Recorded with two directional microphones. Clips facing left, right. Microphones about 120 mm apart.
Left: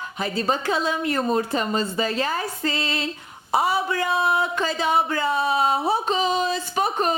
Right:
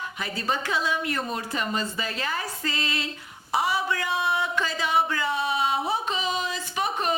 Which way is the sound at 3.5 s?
30° left (ahead or behind).